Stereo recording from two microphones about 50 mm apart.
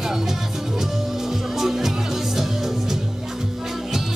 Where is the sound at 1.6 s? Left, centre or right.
Centre.